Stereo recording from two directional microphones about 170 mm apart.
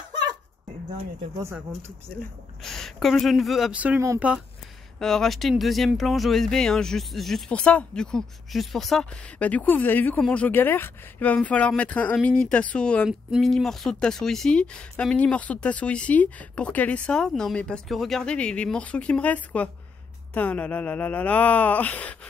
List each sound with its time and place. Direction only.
1.4 s speech: 15° right (ahead or behind)
2.6 s speech: centre (ahead or behind); by 4.2 s 15° right (ahead or behind)
4.9 s speech: 5° left (ahead or behind)